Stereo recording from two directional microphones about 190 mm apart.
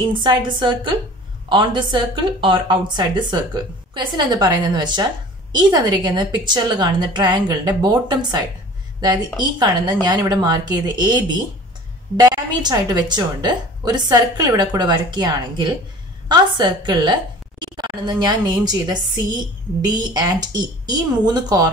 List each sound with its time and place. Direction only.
0.0 s speech: 25° right (ahead or behind)
9.4 s a woman's voice: 20° right (ahead or behind)